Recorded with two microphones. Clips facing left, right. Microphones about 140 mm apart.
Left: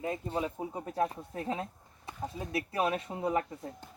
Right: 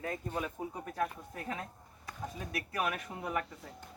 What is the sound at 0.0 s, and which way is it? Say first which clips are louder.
Speech: left 4 dB; 25° left (ahead or behind).